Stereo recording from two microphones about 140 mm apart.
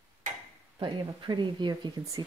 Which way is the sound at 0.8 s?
35° right (ahead or behind).